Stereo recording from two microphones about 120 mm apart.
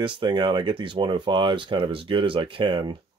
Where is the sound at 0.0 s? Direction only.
45° right (ahead or behind).